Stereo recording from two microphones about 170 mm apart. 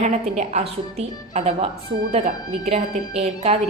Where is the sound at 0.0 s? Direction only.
40° right (ahead or behind).